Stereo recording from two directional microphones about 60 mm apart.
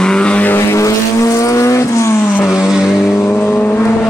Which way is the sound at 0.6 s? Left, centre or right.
Left.